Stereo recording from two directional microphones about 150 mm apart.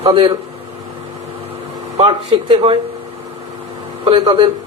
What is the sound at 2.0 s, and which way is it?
Speech, 40° right (ahead or behind).